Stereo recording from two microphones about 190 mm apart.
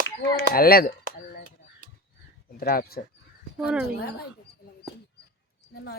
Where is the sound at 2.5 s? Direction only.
50° left (ahead or behind).